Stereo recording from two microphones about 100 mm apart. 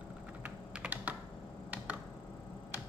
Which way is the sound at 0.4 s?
15° right (ahead or behind).